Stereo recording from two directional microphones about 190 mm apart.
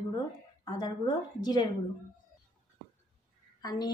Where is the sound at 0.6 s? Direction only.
20° left (ahead or behind).